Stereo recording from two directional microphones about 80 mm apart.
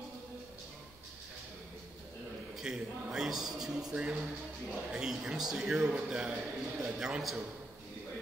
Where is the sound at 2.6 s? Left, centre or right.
Centre.